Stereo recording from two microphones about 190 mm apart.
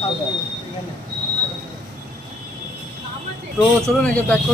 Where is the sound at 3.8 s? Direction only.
5° left (ahead or behind).